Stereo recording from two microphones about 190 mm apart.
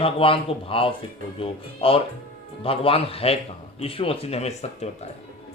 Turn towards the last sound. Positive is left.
turn(degrees=35)  # may be behind; listen again after turning